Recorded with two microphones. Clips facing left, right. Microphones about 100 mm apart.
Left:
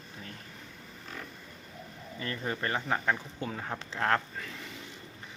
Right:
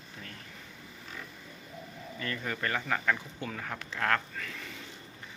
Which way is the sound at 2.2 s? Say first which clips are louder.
Left 1 dB; 30° left (ahead or behind).